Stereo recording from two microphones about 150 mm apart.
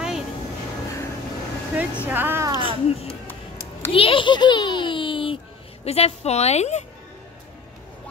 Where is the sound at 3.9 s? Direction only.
35° left (ahead or behind).